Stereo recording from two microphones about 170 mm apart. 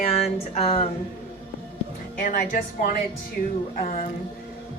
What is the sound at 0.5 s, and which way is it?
Speech, 35° left (ahead or behind).